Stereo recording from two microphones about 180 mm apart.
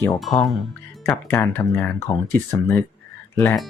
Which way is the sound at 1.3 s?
10° left (ahead or behind).